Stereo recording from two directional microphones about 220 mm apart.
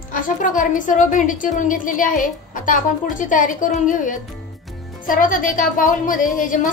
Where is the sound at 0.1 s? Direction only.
35° left (ahead or behind).